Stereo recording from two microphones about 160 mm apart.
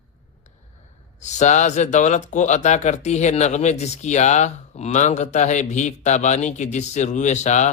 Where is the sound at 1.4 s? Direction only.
50° left (ahead or behind).